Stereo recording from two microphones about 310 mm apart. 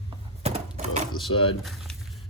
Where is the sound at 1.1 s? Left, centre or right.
Centre.